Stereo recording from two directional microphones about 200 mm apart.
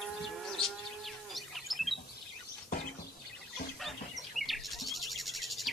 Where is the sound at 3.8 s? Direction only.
Centre (ahead or behind).